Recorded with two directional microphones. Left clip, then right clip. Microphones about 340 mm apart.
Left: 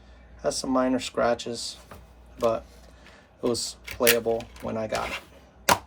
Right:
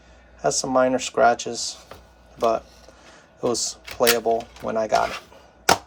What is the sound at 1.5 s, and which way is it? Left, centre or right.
Speech, right.